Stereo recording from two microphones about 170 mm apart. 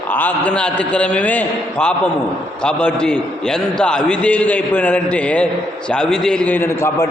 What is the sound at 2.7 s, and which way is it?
A man's voice, 5° left (ahead or behind).